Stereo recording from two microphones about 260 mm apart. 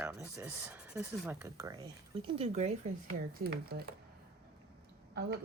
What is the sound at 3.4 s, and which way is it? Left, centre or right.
Speech, right.